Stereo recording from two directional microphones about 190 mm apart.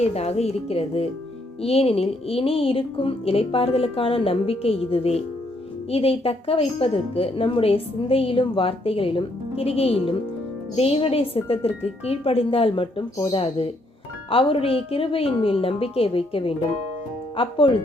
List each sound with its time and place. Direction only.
0.0 s a woman's voice: 35° left (ahead or behind)